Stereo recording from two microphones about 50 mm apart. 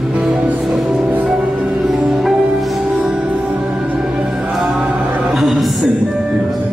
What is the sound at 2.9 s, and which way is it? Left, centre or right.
Music, right.